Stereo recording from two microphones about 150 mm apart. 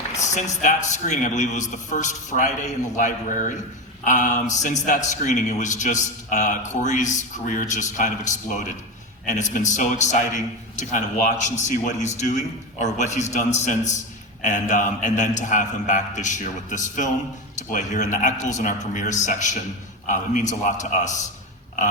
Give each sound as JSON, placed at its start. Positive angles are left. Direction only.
{"t": 0.2, "sound": "a man's voice", "side_deg": 50}